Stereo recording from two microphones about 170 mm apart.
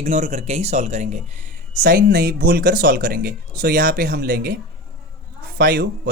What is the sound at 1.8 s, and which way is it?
Speech, 55° right (ahead or behind).